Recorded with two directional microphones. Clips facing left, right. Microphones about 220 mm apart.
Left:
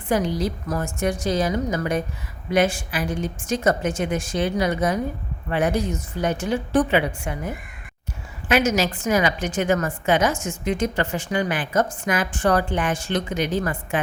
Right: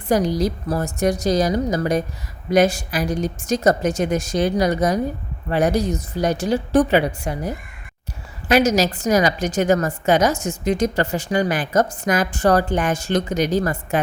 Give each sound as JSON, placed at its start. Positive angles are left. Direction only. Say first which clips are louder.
{"t": 0.1, "sound": "a woman's voice", "louder": "right 4 dB", "side_deg": -40}